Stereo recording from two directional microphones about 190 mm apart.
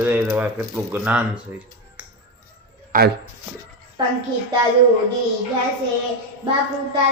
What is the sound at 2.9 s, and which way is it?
Speech, 50° right (ahead or behind).